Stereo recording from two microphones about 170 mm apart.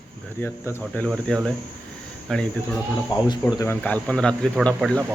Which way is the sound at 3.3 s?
20° left (ahead or behind).